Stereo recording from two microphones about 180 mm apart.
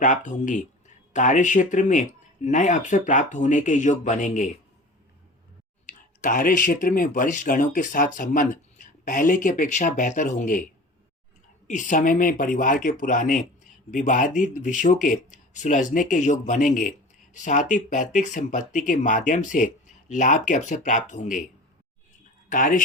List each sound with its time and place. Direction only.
0.0 s speech: 45° left (ahead or behind)
5.8 s speech: 45° left (ahead or behind)
11.7 s speech: 45° left (ahead or behind)
22.4 s speech: 45° left (ahead or behind)